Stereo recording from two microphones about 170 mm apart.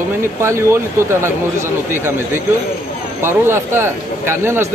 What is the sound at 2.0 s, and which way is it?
A man's voice, 15° right (ahead or behind).